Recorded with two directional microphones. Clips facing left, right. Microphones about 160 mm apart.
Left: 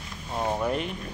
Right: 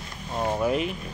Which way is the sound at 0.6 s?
5° right (ahead or behind).